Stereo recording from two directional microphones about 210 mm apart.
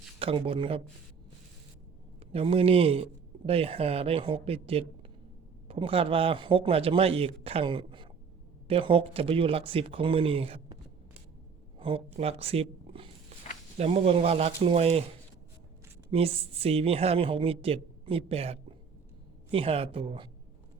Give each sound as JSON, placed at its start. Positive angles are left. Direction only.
{"t": 0.2, "sound": "a woman's voice", "side_deg": -25}
{"t": 2.3, "sound": "a woman's voice", "side_deg": -25}
{"t": 11.8, "sound": "a woman's voice", "side_deg": -25}
{"t": 16.0, "sound": "a woman's voice", "side_deg": -25}